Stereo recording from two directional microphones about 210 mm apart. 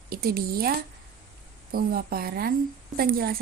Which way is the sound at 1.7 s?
45° right (ahead or behind).